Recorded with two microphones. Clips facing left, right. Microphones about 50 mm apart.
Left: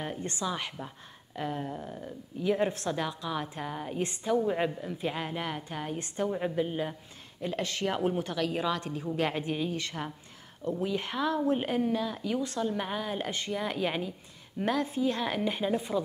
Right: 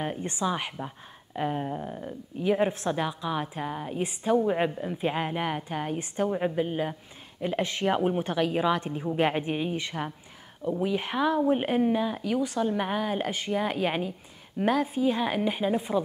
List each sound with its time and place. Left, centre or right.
0.0 s a woman's voice: right